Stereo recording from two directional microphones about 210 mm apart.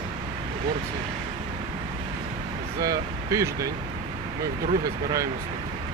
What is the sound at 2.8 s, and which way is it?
Speech, 15° right (ahead or behind).